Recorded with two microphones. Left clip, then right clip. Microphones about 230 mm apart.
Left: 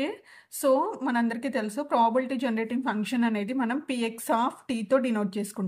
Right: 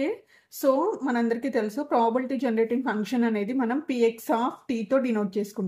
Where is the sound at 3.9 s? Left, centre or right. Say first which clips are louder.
Right 4 dB; left.